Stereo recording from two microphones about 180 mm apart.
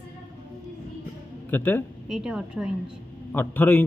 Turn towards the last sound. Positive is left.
turn(degrees=10)  # may be behind; listen again after turning